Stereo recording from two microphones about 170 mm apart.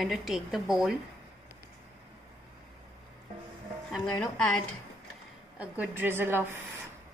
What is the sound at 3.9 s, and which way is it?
Speech, 5° left (ahead or behind).